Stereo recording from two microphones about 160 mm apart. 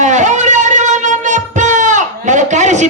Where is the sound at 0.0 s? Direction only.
50° right (ahead or behind).